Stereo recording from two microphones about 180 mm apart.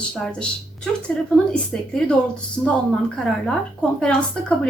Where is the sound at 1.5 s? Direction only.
5° left (ahead or behind).